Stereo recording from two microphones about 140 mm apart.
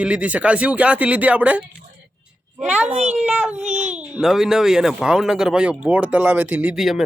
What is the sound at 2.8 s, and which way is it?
Speech, 50° right (ahead or behind).